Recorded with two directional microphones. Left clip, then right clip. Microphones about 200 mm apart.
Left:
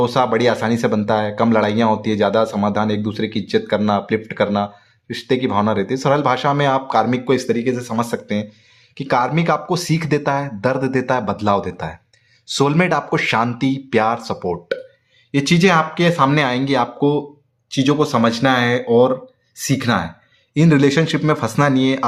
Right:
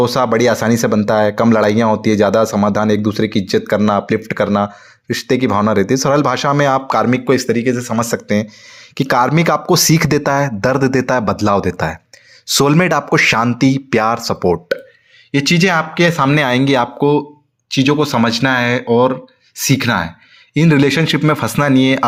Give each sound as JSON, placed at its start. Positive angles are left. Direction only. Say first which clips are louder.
{"t": 0.0, "sound": "speech", "louder": "right 3 dB", "side_deg": -30}